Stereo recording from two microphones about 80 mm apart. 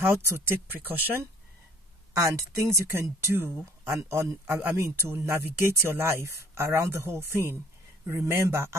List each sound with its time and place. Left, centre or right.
0.0 s speech: right
2.1 s speech: right